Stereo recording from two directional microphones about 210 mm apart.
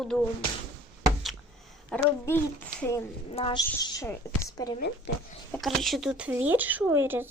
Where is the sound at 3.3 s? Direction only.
25° left (ahead or behind).